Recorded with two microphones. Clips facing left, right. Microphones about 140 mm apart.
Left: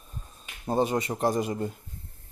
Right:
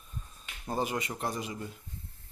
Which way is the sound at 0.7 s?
30° left (ahead or behind).